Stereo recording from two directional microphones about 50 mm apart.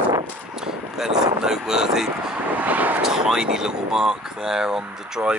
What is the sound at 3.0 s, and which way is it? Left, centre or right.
Speech, centre.